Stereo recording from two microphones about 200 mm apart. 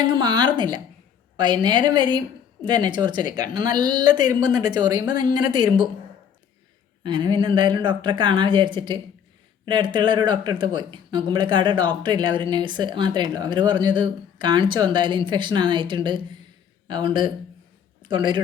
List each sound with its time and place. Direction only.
0.0 s speech: 20° right (ahead or behind)
7.0 s speech: 20° right (ahead or behind)